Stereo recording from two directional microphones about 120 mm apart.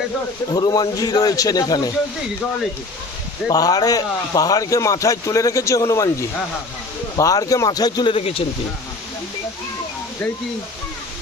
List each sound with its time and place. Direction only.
0.5 s speech: 35° left (ahead or behind)
3.4 s a man's voice: 30° left (ahead or behind)
7.2 s speech: 30° left (ahead or behind)
8.1 s speech: 50° left (ahead or behind)